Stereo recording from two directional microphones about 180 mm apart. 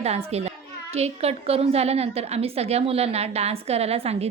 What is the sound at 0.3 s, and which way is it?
A child's voice, 35° right (ahead or behind).